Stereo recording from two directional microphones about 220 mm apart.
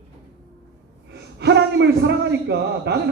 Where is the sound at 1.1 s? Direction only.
50° right (ahead or behind).